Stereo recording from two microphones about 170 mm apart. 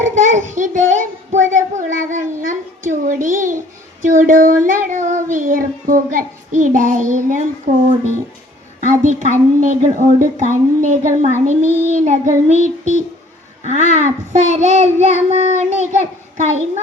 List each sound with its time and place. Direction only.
0.0 s speech: 50° right (ahead or behind)
8.8 s speech: 45° right (ahead or behind)
15.3 s child singing: 40° right (ahead or behind)